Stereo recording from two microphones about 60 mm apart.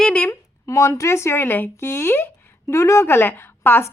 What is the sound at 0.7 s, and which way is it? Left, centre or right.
A woman's voice, left.